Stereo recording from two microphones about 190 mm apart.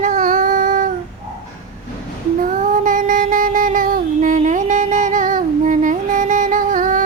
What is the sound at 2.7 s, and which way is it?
Music, 45° right (ahead or behind).